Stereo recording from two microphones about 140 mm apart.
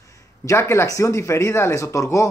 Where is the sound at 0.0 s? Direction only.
20° left (ahead or behind).